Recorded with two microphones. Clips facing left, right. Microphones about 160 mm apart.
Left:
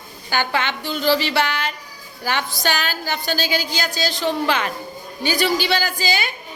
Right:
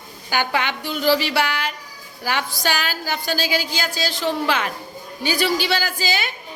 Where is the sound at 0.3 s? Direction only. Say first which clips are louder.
Even; 15° right (ahead or behind).